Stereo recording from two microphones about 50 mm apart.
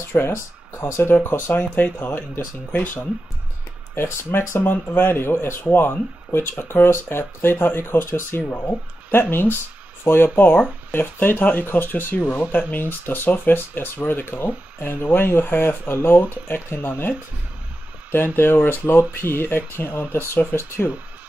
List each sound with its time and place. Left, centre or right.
0.3 s speech: left
1.1 s speech: left
3.9 s speech: left
8.4 s speech: left
18.1 s speech: left
18.6 s speech: left